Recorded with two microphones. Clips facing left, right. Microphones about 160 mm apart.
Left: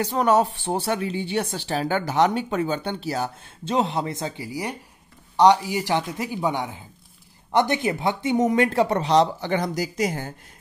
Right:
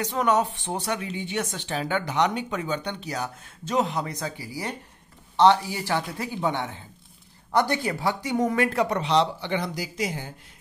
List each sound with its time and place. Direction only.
0.0 s speech: 40° left (ahead or behind)